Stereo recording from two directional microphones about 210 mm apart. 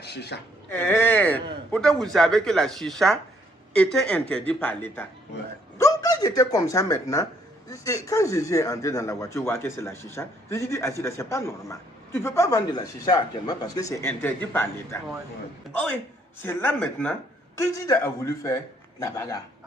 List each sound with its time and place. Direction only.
0.0 s speech: 50° left (ahead or behind)
0.7 s speech: 10° left (ahead or behind)
16.4 s speech: 10° left (ahead or behind)